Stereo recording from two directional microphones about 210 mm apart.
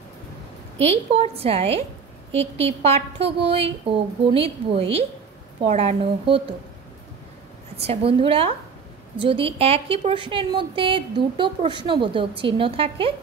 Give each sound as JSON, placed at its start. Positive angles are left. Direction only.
{"t": 0.7, "sound": "a woman's voice", "side_deg": -30}
{"t": 7.8, "sound": "a woman's voice", "side_deg": -30}